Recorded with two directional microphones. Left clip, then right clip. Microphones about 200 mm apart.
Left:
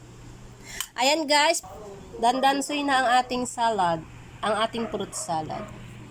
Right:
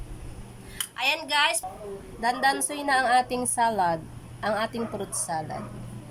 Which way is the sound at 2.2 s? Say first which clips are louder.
Left 3 dB; 5° left (ahead or behind).